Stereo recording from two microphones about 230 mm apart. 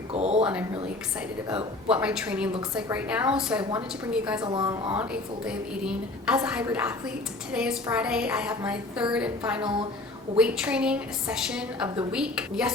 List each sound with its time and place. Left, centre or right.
0.1 s speech: right
1.5 s a woman's voice: centre
4.4 s a woman's voice: centre
5.5 s a woman's voice: centre